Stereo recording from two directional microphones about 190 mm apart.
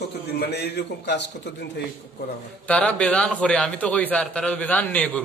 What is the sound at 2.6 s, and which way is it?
A man's voice, 5° left (ahead or behind).